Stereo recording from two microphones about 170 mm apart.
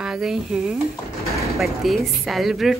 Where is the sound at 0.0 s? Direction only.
5° right (ahead or behind).